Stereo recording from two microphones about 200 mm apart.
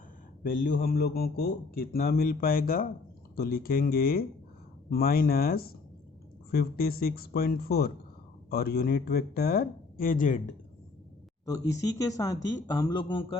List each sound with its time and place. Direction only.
0.4 s a man's voice: 45° left (ahead or behind)
11.4 s speech: 15° left (ahead or behind)